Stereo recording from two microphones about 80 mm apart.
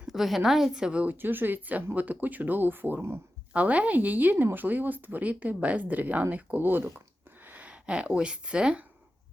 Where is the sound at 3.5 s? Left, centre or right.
Centre.